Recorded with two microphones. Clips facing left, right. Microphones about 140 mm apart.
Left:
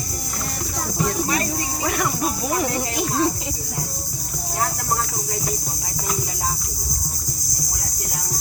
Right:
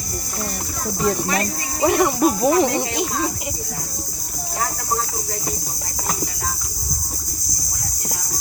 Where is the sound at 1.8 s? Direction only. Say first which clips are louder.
Right 9 dB; 25° right (ahead or behind).